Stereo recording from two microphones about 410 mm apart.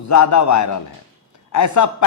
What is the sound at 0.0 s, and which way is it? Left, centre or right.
A man's voice, left.